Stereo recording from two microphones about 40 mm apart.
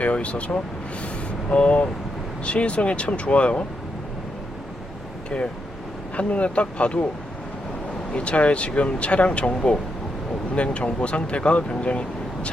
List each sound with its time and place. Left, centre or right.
0.0 s speech: left
1.0 s vehicle: left
2.4 s speech: left
6.1 s speech: left
8.1 s speech: left